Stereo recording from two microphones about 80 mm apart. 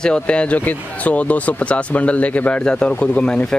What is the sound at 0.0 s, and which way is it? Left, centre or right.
Speech, centre.